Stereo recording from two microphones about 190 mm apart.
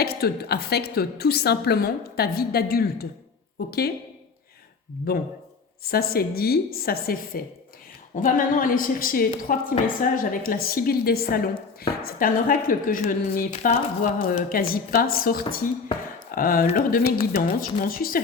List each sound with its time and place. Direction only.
0.0 s a woman's voice: 55° left (ahead or behind)
5.1 s a woman's voice: 50° left (ahead or behind)
13.5 s a woman's voice: 35° left (ahead or behind)